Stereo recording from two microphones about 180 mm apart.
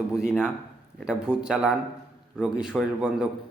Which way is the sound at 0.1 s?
5° right (ahead or behind).